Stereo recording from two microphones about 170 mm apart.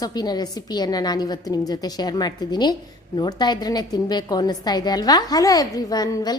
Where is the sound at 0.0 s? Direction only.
25° left (ahead or behind).